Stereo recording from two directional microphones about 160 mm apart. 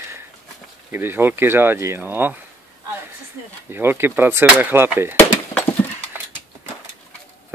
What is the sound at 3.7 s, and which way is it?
Speech, 15° right (ahead or behind).